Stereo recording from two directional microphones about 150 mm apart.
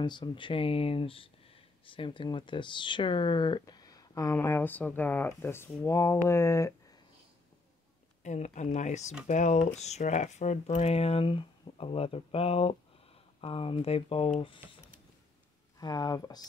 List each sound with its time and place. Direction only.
0.0 s speech: 30° left (ahead or behind)
8.2 s speech: 50° left (ahead or behind); by 14.8 s 35° left (ahead or behind)
15.8 s speech: 25° left (ahead or behind)